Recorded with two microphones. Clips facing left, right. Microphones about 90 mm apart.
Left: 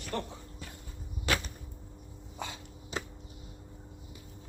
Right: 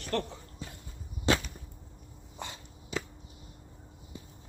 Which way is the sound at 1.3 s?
25° right (ahead or behind).